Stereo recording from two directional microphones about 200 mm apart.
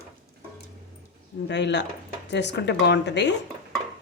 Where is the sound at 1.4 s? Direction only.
60° left (ahead or behind).